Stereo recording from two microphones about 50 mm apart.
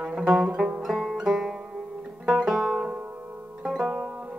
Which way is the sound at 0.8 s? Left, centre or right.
Centre.